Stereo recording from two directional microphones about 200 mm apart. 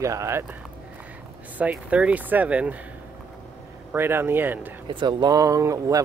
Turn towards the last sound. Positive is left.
turn(degrees=-15)  # may be behind; listen again after turning